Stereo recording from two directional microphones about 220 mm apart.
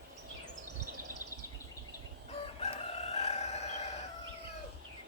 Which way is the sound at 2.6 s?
30° left (ahead or behind).